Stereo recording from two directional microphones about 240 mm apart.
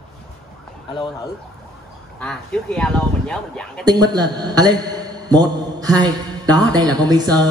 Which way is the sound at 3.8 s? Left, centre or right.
Centre.